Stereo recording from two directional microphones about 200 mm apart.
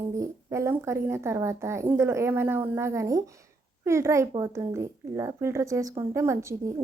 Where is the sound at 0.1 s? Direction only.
15° right (ahead or behind).